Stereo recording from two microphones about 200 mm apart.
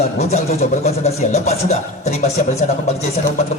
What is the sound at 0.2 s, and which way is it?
A man's voice, 35° left (ahead or behind).